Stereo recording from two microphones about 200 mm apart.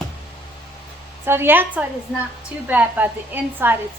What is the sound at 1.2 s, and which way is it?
A woman's voice, 10° right (ahead or behind).